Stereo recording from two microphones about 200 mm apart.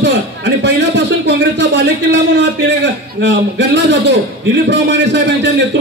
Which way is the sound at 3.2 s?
60° right (ahead or behind).